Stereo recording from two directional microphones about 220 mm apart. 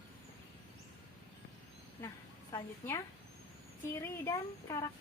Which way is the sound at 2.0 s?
15° left (ahead or behind).